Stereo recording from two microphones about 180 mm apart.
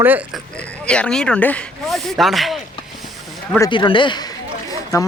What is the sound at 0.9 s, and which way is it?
Speech, 5° left (ahead or behind).